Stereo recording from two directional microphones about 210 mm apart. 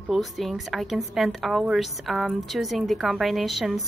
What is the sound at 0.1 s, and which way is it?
A woman's voice, centre (ahead or behind).